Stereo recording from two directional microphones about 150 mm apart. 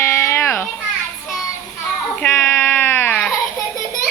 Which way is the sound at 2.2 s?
15° left (ahead or behind).